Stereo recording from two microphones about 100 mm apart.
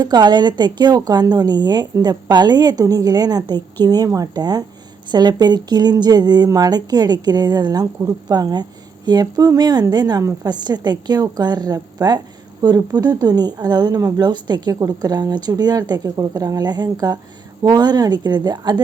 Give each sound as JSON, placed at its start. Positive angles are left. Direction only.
{"t": 0.0, "sound": "speech", "side_deg": -45}